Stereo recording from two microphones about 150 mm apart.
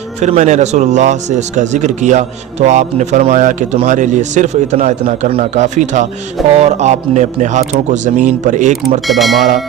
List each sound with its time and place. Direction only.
0.2 s speech: 50° right (ahead or behind)
9.0 s speech: centre (ahead or behind)